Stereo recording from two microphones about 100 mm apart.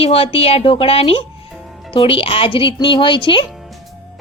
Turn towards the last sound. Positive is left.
turn(degrees=55)  # may be behind; listen again after turning